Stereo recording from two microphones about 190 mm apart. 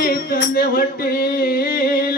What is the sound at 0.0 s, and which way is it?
Music, 50° left (ahead or behind).